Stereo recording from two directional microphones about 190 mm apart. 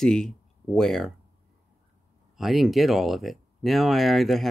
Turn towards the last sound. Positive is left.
turn(degrees=0)  # may be behind; listen again after turning